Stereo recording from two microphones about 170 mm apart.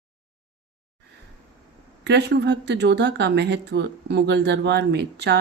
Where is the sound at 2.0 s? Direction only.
90° right.